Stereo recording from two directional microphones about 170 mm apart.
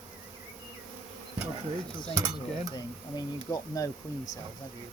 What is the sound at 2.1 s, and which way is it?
Speech, 20° right (ahead or behind).